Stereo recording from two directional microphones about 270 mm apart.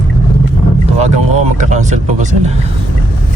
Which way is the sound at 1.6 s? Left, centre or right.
Right.